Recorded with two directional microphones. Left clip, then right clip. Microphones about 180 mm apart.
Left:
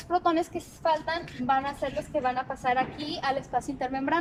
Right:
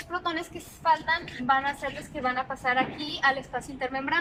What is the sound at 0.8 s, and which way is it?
A woman's voice, 25° left (ahead or behind).